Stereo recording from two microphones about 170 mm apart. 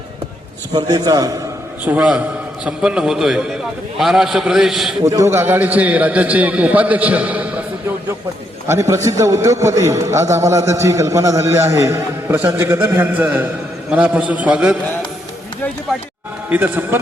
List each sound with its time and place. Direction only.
0.7 s a man's voice: 25° right (ahead or behind)
1.8 s a man's voice: 10° right (ahead or behind)
5.0 s a man's voice: 15° right (ahead or behind)
8.6 s a man's voice: 15° right (ahead or behind)
16.5 s a man's voice: 10° right (ahead or behind)